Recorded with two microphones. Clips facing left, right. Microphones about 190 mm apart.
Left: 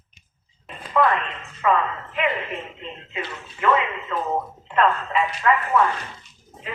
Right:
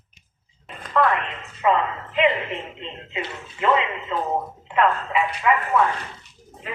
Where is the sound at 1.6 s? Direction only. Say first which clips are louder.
Right 1 dB; 20° right (ahead or behind).